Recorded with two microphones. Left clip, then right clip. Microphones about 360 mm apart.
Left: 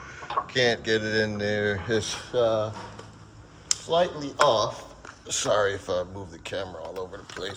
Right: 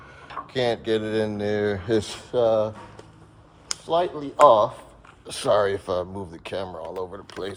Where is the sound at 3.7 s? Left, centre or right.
Centre.